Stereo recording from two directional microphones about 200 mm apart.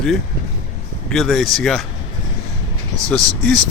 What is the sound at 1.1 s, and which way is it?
Speech, centre (ahead or behind).